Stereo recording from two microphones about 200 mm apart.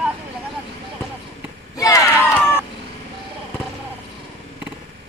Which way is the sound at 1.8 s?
15° left (ahead or behind).